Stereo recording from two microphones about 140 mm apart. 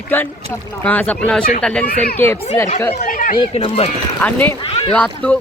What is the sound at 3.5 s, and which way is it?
Speech, 45° left (ahead or behind).